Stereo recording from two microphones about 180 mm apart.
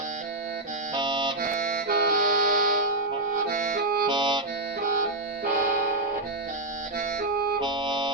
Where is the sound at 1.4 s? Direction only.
50° right (ahead or behind).